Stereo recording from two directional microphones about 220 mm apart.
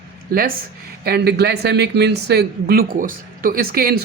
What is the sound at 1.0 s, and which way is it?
Speech, 45° right (ahead or behind).